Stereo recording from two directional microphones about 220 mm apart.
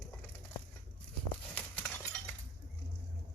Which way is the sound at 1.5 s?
5° left (ahead or behind).